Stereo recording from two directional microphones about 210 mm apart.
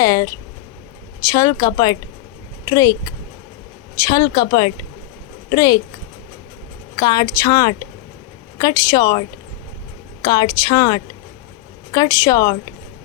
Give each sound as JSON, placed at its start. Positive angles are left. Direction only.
{"t": 0.0, "sound": "speech", "side_deg": 15}
{"t": 6.9, "sound": "speech", "side_deg": 20}
{"t": 10.2, "sound": "speech", "side_deg": 20}